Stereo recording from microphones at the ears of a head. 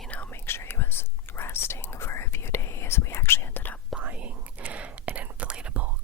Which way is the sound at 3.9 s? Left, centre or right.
Right.